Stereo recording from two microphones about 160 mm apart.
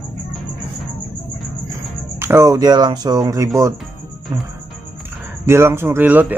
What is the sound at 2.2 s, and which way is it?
Speech, 15° right (ahead or behind).